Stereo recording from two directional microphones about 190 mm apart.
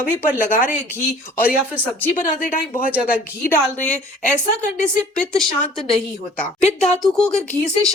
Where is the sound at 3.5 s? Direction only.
10° left (ahead or behind).